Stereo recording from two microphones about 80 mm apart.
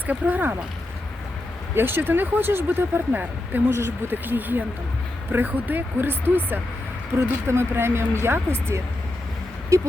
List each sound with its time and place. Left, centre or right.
0.1 s speech: right
1.7 s speech: right
9.7 s speech: right